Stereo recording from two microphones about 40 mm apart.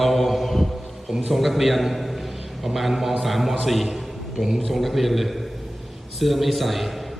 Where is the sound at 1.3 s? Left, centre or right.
Centre.